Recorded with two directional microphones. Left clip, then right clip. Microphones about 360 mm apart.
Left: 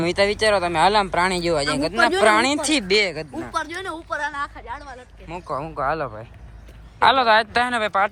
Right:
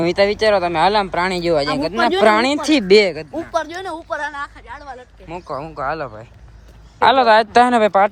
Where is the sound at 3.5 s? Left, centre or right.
Right.